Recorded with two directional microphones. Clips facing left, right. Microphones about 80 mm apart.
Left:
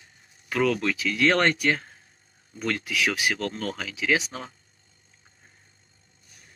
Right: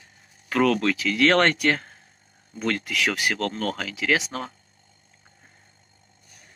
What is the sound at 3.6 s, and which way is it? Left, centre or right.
Speech, right.